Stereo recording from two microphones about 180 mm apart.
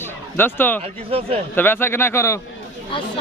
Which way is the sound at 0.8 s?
35° right (ahead or behind).